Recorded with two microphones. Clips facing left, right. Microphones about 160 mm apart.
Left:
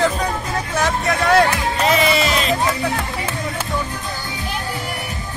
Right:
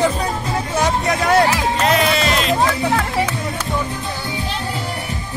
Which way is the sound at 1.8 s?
Centre (ahead or behind).